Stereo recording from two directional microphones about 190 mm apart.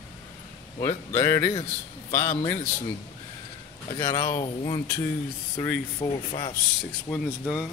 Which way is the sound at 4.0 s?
20° left (ahead or behind).